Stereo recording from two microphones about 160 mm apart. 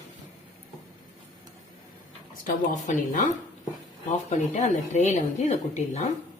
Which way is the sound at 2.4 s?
55° left (ahead or behind).